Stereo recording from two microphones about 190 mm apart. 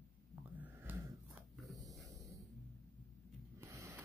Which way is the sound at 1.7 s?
20° right (ahead or behind).